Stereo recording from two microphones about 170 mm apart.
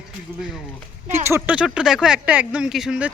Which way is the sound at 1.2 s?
10° right (ahead or behind).